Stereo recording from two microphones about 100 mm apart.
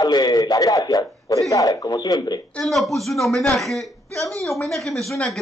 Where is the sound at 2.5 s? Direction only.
Centre (ahead or behind).